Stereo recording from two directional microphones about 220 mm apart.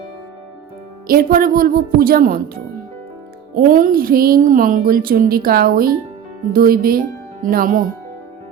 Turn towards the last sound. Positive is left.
turn(degrees=-40)  # may be behind; listen again after turning